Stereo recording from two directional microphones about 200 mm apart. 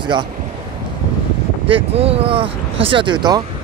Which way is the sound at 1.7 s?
30° right (ahead or behind).